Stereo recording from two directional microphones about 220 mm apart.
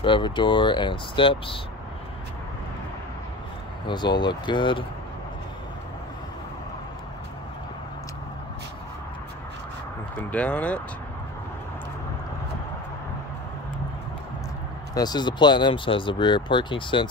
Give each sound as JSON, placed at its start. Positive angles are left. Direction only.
{"t": 0.0, "sound": "speech", "side_deg": 20}
{"t": 3.8, "sound": "speech", "side_deg": 20}
{"t": 10.3, "sound": "speech", "side_deg": 5}
{"t": 15.0, "sound": "speech", "side_deg": 20}